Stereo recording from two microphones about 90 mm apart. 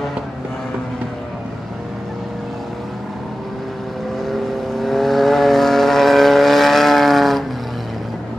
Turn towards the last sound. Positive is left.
turn(degrees=0)  # may be behind; listen again after turning